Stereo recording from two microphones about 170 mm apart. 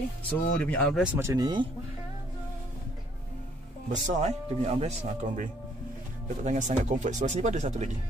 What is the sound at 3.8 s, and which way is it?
Speech, 45° right (ahead or behind).